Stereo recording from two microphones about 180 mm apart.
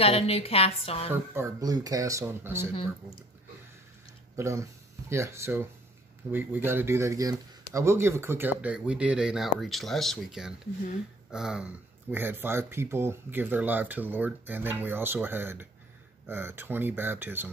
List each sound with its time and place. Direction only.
0.0 s a woman's voice: 35° left (ahead or behind)
1.1 s speech: 15° right (ahead or behind)
2.7 s speech: 30° left (ahead or behind)
4.4 s speech: 15° right (ahead or behind)